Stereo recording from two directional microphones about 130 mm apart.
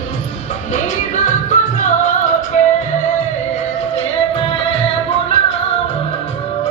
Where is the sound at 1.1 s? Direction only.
75° left (ahead or behind).